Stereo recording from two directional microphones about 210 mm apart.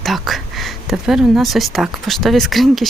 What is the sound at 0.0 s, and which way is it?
Speech, centre (ahead or behind).